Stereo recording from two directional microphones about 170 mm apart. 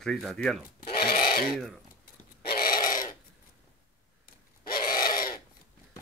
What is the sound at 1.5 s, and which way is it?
Speech, centre (ahead or behind).